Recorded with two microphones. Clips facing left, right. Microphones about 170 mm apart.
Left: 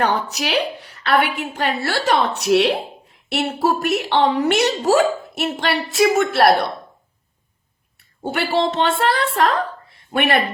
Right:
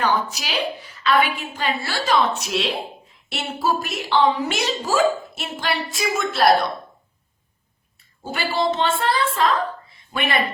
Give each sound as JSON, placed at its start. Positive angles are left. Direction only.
{"t": 0.0, "sound": "a woman's voice", "side_deg": 65}
{"t": 8.2, "sound": "a woman's voice", "side_deg": 65}